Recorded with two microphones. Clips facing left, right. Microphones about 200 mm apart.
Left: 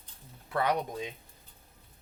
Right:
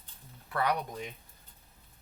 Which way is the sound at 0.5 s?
20° left (ahead or behind).